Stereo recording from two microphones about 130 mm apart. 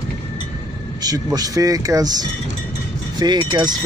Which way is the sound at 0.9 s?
30° right (ahead or behind).